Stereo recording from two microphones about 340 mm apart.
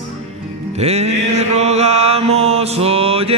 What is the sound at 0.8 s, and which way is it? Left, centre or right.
Mantra, centre.